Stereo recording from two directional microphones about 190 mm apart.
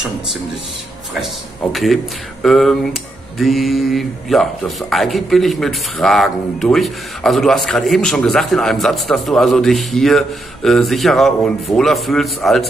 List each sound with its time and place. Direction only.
1.7 s speech: centre (ahead or behind)